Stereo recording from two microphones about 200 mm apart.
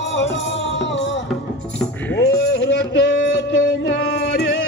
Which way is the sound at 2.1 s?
55° left (ahead or behind).